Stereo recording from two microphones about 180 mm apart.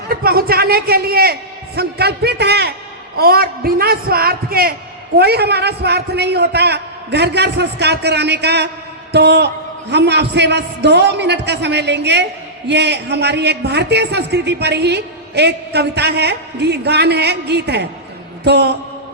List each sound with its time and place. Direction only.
0.1 s a man's voice: 55° right (ahead or behind)